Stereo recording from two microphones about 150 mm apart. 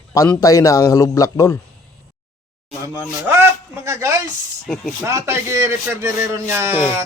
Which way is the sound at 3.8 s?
20° right (ahead or behind).